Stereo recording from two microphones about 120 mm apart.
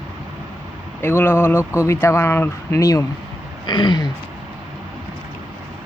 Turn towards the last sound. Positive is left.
turn(degrees=35)  # may be behind; listen again after turning